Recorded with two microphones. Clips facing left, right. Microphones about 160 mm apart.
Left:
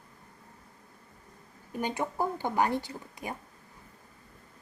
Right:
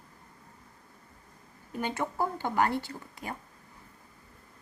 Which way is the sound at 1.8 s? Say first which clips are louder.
Even; 15° left (ahead or behind).